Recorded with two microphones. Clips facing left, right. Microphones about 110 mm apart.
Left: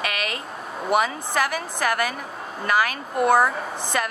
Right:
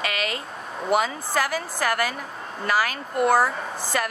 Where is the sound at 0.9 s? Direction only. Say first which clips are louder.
Left 1 dB; 20° left (ahead or behind).